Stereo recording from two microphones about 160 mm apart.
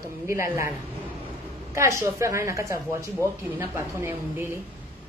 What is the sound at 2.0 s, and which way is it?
A woman's voice, 15° right (ahead or behind).